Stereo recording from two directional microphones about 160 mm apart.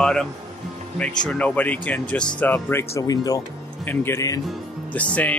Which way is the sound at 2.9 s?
25° left (ahead or behind).